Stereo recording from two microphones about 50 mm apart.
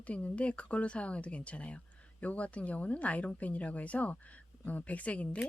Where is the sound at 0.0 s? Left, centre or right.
Left.